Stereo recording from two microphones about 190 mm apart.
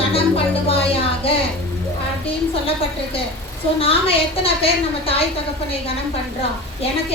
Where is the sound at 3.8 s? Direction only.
30° left (ahead or behind).